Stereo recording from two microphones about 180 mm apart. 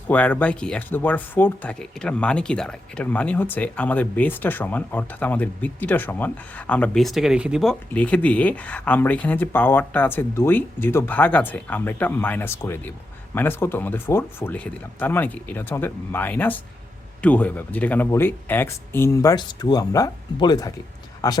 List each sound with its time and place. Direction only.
0.1 s speech: 10° left (ahead or behind)